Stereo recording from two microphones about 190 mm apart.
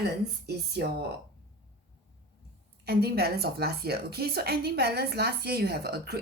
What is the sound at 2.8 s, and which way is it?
A woman's voice, 55° right (ahead or behind).